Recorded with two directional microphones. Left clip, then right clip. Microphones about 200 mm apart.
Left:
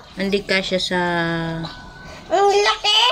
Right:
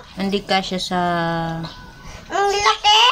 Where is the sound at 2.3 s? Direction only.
40° right (ahead or behind).